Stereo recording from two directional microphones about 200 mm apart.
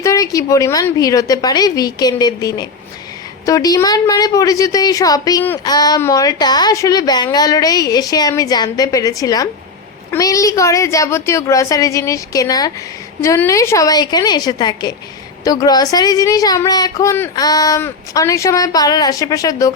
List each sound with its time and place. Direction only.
0.0 s a woman's voice: 15° left (ahead or behind)